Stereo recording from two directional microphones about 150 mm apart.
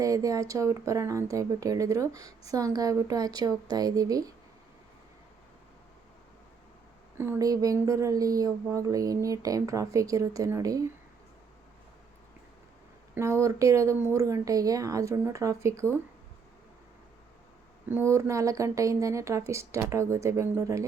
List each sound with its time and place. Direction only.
0.0 s a woman's voice: 20° right (ahead or behind)
7.2 s a woman's voice: 20° right (ahead or behind)
13.1 s a woman's voice: 20° right (ahead or behind)
17.8 s a woman's voice: 15° right (ahead or behind)